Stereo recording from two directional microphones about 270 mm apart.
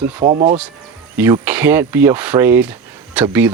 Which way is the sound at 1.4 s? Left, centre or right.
Centre.